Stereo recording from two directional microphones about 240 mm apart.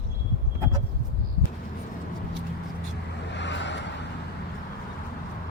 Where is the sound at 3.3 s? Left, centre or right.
Left.